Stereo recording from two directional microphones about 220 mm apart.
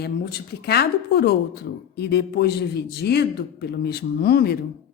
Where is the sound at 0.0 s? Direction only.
45° left (ahead or behind).